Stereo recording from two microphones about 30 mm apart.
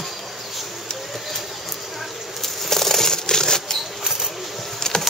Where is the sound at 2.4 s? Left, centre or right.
Centre.